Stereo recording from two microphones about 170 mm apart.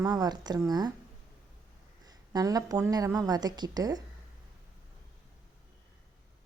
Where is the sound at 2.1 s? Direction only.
20° right (ahead or behind).